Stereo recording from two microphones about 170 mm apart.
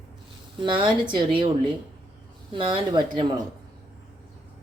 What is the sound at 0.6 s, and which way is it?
Speech, 30° right (ahead or behind).